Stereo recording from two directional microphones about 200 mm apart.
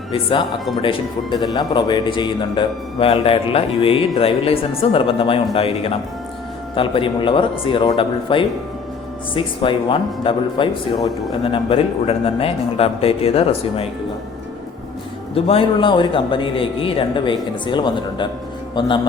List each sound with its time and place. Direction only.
0.1 s speech: 25° left (ahead or behind)
15.4 s a man's voice: 30° left (ahead or behind)